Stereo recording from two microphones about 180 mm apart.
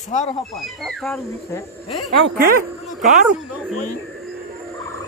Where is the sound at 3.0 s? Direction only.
45° right (ahead or behind).